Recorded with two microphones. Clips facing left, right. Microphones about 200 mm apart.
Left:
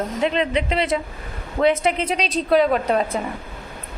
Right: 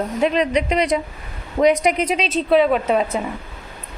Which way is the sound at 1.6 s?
15° right (ahead or behind).